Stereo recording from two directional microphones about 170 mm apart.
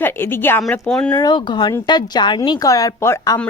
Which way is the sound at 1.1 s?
25° left (ahead or behind).